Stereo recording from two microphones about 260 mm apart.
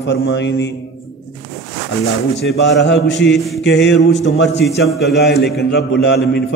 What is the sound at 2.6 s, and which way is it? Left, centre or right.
A man's voice, left.